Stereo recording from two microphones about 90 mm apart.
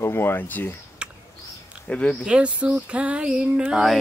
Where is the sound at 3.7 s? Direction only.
Centre (ahead or behind).